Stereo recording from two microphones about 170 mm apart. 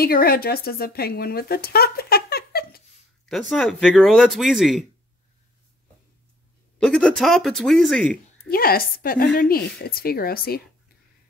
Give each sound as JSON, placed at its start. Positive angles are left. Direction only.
{"t": 0.0, "sound": "speech", "side_deg": 60}
{"t": 3.3, "sound": "speech", "side_deg": 0}
{"t": 6.8, "sound": "speech", "side_deg": 5}
{"t": 8.5, "sound": "speech", "side_deg": 60}